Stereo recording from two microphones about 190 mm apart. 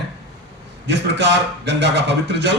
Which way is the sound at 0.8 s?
70° right (ahead or behind).